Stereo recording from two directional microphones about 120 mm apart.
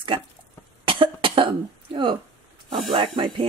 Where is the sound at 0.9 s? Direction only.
45° right (ahead or behind).